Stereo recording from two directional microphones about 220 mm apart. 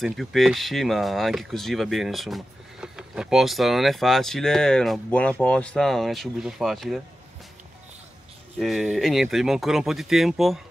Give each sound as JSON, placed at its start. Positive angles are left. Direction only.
{"t": 0.0, "sound": "speech", "side_deg": 0}
{"t": 8.5, "sound": "speech", "side_deg": 0}